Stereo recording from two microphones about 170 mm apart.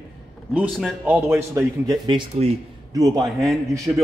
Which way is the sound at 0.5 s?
5° right (ahead or behind).